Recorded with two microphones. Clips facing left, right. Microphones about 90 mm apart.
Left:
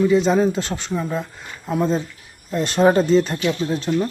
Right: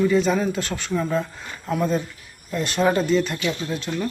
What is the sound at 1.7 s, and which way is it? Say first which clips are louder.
Speech: left 2 dB; 25° left (ahead or behind).